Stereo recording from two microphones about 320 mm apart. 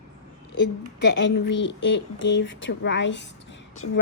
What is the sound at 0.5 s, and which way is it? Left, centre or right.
Speech, left.